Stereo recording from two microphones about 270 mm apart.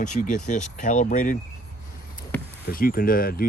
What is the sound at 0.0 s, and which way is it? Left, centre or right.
Speech, left.